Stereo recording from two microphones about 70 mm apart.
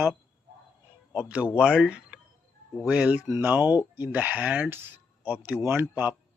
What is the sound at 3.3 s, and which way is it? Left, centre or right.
Speech, right.